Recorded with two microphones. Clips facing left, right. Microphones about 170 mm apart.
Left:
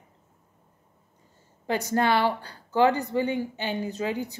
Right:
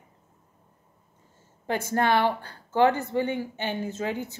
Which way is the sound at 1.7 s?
10° left (ahead or behind).